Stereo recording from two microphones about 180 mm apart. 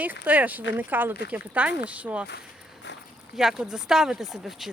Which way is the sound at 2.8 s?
75° left (ahead or behind).